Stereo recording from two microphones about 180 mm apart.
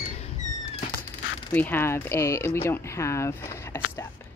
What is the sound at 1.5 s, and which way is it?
Speech, 10° left (ahead or behind).